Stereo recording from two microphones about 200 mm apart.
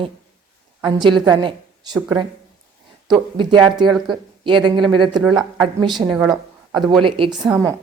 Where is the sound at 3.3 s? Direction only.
20° right (ahead or behind).